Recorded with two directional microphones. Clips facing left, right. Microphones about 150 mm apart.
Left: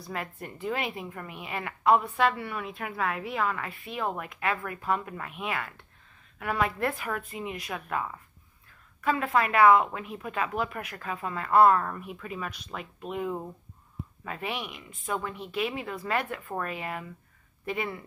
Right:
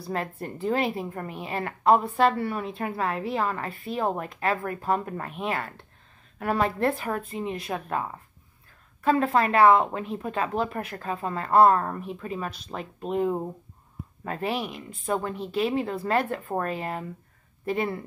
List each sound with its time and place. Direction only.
0.0 s a woman's voice: 35° right (ahead or behind)